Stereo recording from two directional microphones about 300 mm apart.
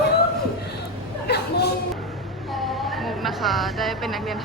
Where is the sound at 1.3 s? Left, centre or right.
Left.